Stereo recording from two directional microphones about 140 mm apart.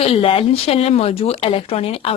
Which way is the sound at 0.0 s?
40° left (ahead or behind).